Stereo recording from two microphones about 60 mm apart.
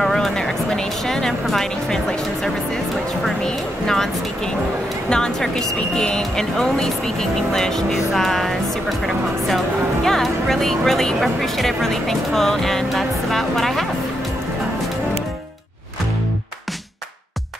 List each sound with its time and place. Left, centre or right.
0.0 s speech: centre
5.1 s speech: centre